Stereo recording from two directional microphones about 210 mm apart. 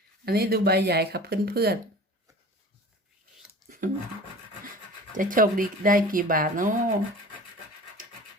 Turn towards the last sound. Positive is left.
turn(degrees=-40)  # may be behind; listen again after turning